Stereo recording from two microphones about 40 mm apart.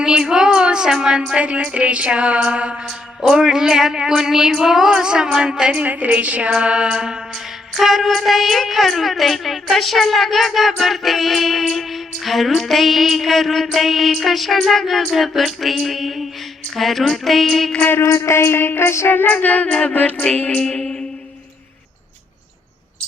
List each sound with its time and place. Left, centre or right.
0.0 s music: centre
1.3 s music: right
3.2 s a sound: centre
5.7 s music: right; by 7.2 s centre
7.7 s music: centre
17.8 s a sound: left
19.3 s music: left
20.5 s music: left